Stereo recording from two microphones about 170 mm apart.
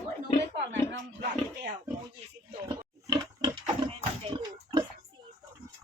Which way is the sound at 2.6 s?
25° right (ahead or behind).